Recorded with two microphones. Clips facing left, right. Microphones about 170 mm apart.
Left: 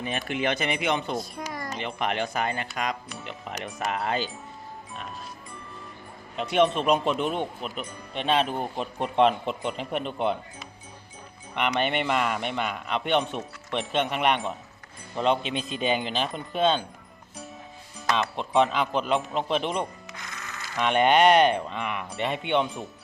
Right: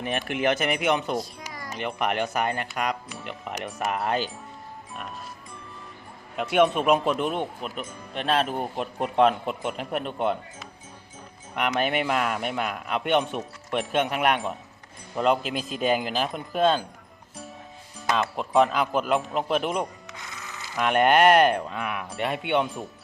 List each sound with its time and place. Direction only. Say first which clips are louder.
0.0 s speech: right 2 dB; 5° right (ahead or behind)
1.2 s music: left 4 dB; 55° left (ahead or behind)
1.7 s speech: right 3 dB; centre (ahead or behind)
6.3 s speech: right 1 dB; 5° right (ahead or behind)
18.1 s speech: right 1 dB; 5° right (ahead or behind)